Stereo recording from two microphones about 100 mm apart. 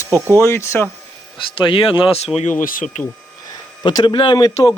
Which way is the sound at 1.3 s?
55° left (ahead or behind).